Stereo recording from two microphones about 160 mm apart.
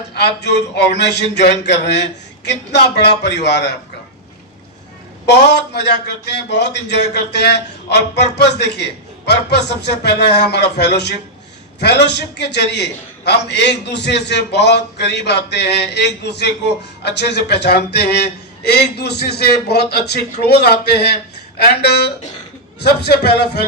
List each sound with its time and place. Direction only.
0.1 s a man's voice: 90° left
5.2 s a man's voice: 90° left